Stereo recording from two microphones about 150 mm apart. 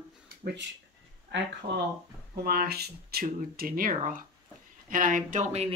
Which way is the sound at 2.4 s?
90° right.